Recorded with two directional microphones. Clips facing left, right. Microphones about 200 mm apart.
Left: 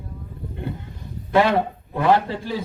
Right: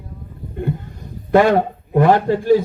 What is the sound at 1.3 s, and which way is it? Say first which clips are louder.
A man's voice: right 5 dB; 45° right (ahead or behind).